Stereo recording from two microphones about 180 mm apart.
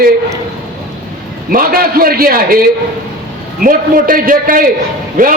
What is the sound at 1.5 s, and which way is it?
A man's voice, 55° right (ahead or behind).